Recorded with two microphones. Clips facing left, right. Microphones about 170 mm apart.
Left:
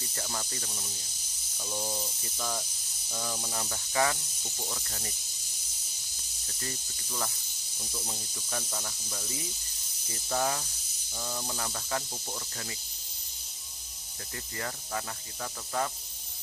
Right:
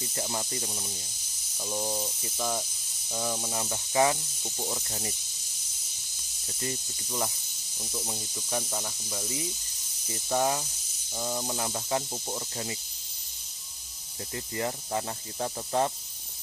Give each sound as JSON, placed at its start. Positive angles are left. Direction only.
{"t": 0.2, "sound": "speech", "side_deg": -20}
{"t": 6.5, "sound": "speech", "side_deg": -20}
{"t": 14.3, "sound": "speech", "side_deg": -20}